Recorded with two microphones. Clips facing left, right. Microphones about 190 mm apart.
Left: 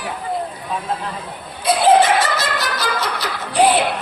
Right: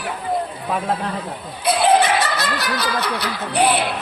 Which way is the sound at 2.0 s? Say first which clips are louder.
Left 2 dB; 65° right (ahead or behind).